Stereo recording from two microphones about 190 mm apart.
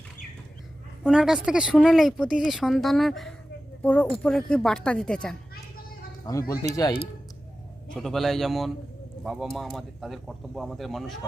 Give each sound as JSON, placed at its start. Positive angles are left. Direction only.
{"t": 1.0, "sound": "speech", "side_deg": -5}
{"t": 6.5, "sound": "speech", "side_deg": 15}
{"t": 7.9, "sound": "speech", "side_deg": 0}